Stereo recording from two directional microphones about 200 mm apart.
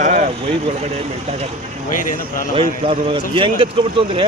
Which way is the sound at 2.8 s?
25° right (ahead or behind).